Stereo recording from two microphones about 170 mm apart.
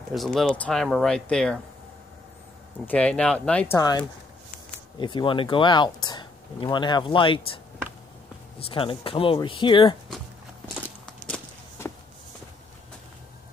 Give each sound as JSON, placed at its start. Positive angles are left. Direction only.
{"t": 0.1, "sound": "speech", "side_deg": 0}
{"t": 2.8, "sound": "speech", "side_deg": 10}
{"t": 3.7, "sound": "speech", "side_deg": 25}
{"t": 11.1, "sound": "a sound", "side_deg": 5}